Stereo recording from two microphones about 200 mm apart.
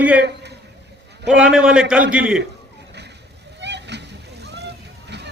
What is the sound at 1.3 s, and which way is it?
A man's voice, 5° right (ahead or behind).